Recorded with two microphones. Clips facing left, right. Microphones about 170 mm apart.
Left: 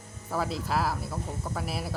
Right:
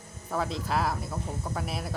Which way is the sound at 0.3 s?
5° left (ahead or behind).